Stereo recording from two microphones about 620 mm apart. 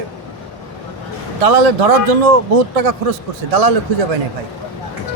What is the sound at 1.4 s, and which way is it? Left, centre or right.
A man's voice, right.